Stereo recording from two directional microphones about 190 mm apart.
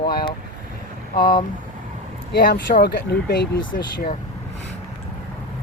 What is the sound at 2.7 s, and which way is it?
Speech, 40° left (ahead or behind).